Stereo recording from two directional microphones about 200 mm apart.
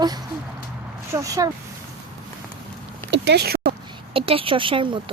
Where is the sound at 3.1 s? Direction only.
55° right (ahead or behind).